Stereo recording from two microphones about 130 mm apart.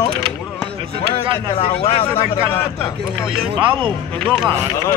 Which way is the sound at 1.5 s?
50° left (ahead or behind).